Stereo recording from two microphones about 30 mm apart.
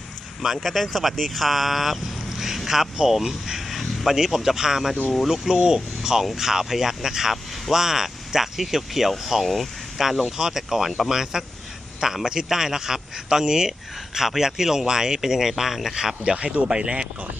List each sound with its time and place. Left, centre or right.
0.6 s speech: centre
3.8 s vehicle: centre
4.1 s a man's voice: centre
16.2 s speech: right